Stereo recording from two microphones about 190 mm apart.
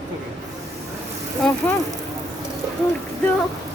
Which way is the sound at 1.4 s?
Centre (ahead or behind).